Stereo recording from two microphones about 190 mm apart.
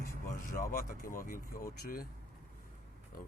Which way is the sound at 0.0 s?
45° left (ahead or behind).